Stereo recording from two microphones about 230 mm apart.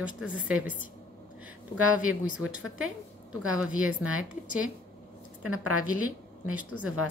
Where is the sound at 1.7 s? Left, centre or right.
Right.